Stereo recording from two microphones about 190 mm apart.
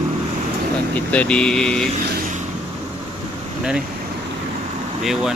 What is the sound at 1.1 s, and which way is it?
Speech, 5° left (ahead or behind).